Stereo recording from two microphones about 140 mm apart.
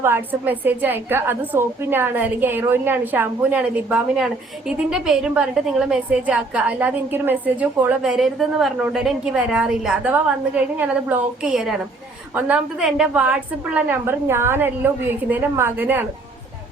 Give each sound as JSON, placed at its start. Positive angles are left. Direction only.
{"t": 0.0, "sound": "a woman's voice", "side_deg": -15}